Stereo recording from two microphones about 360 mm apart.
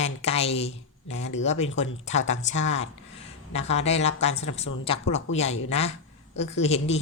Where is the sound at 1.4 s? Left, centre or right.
Centre.